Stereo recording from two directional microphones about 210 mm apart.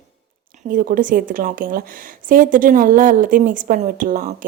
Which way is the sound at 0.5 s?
40° right (ahead or behind).